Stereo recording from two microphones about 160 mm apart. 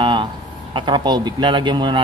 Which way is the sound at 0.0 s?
30° right (ahead or behind).